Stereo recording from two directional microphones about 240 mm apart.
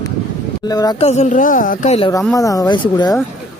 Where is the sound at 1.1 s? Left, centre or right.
Left.